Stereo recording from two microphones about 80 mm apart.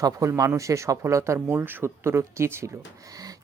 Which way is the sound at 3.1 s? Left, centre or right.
Right.